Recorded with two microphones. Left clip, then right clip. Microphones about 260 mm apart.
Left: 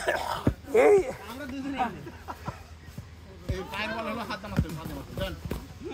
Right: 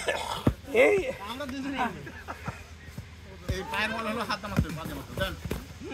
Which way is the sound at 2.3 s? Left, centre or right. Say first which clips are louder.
Left 1 dB; centre.